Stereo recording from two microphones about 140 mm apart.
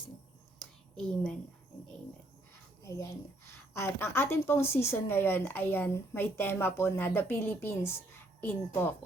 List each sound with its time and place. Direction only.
0.6 s whispering: 5° left (ahead or behind)
2.8 s a woman's voice: 20° left (ahead or behind)